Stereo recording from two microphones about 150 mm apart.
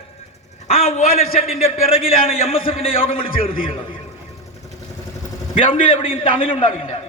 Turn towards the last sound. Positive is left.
turn(degrees=40)  # may be behind; listen again after turning